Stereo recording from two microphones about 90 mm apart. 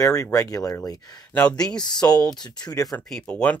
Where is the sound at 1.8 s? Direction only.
50° left (ahead or behind).